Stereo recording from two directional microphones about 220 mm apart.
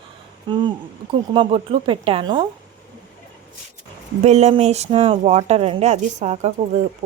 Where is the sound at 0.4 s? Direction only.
20° right (ahead or behind).